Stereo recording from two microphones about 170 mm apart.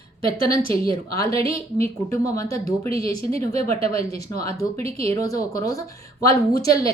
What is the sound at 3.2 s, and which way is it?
Speech, 35° right (ahead or behind).